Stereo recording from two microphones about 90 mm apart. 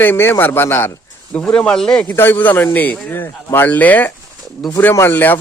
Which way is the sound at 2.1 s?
25° left (ahead or behind).